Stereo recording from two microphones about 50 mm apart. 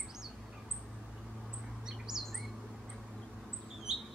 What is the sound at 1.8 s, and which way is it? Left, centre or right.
Bird, centre.